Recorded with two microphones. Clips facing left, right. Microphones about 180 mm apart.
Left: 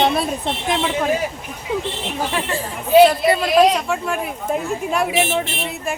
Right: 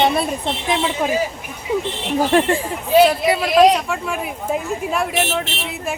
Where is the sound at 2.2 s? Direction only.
45° right (ahead or behind).